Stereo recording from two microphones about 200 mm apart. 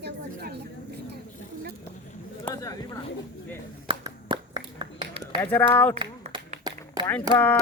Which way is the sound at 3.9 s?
25° right (ahead or behind).